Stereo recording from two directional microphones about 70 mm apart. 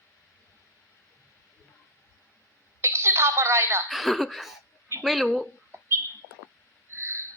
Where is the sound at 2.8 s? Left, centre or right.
Right.